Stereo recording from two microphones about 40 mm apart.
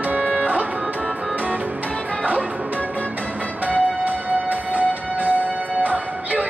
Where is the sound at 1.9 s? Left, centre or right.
Left.